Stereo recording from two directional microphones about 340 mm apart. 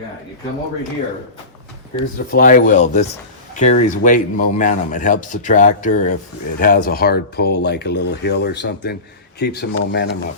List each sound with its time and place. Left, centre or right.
2.1 s a man's voice: left